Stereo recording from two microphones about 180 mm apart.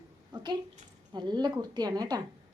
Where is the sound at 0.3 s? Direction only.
25° right (ahead or behind).